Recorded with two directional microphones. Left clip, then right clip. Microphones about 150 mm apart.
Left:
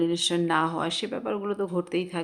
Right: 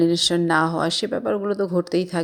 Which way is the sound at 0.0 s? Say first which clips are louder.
Right 6 dB; 30° right (ahead or behind).